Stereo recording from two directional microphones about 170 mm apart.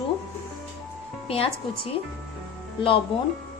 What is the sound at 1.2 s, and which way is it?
Speech, 35° left (ahead or behind).